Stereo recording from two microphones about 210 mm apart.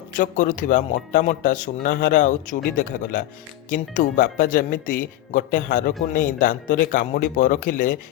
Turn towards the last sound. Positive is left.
turn(degrees=40)  # may be behind; listen again after turning